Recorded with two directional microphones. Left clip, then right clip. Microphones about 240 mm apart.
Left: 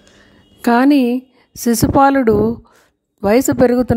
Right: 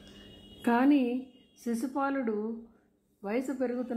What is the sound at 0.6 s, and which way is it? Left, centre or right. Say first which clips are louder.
A woman's voice: left 14 dB; left.